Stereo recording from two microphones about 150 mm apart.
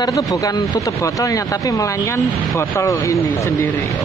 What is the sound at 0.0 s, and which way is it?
Speech, 25° left (ahead or behind).